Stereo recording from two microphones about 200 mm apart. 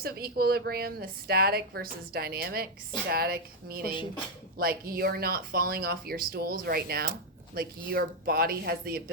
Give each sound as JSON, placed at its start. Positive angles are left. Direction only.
{"t": 0.0, "sound": "a woman's voice", "side_deg": -50}